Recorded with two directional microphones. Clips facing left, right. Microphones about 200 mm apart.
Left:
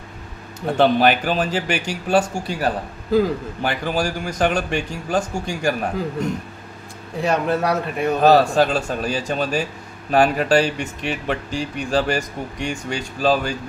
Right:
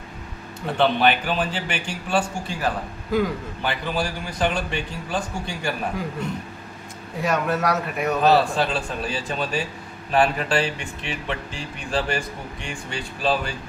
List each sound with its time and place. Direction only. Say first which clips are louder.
0.6 s speech: left 4 dB; 40° left (ahead or behind)
7.2 s speech: left 3 dB; 30° left (ahead or behind)